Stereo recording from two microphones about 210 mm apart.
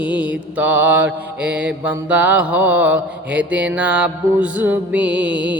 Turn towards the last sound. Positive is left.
turn(degrees=-5)  # may be behind; listen again after turning